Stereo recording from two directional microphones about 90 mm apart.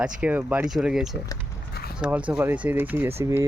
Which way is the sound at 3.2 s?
35° right (ahead or behind).